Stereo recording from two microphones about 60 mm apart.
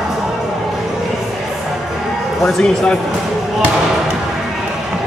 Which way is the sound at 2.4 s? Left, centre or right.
Centre.